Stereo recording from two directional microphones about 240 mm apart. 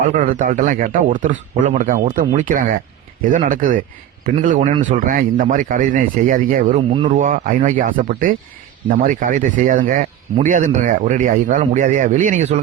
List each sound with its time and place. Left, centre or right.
0.2 s speech: right